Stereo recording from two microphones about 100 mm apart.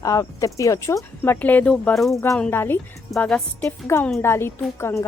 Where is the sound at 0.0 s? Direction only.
35° left (ahead or behind); by 2.1 s 5° left (ahead or behind).